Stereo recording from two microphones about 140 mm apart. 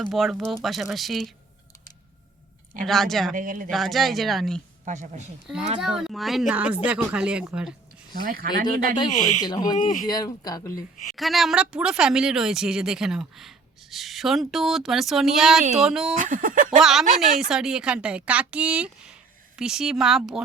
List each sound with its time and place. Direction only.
0.0 s speech: centre (ahead or behind)
2.8 s speech: centre (ahead or behind)
3.3 s speech: 70° right (ahead or behind)
3.7 s speech: centre (ahead or behind)
4.9 s speech: 60° right (ahead or behind)
5.8 s a woman's voice: 5° right (ahead or behind)
8.2 s speech: 90° right
9.0 s speech: 60° left (ahead or behind)
9.4 s speech: 30° left (ahead or behind)
9.7 s speech: 70° left (ahead or behind)
10.1 s speech: 30° left (ahead or behind)
11.1 s speech: centre (ahead or behind)
16.1 s speech: 75° right (ahead or behind)
16.8 s a woman's voice: 5° right (ahead or behind)